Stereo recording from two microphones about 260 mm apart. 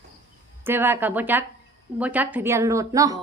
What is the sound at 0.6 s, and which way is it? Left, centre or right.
Speech, centre.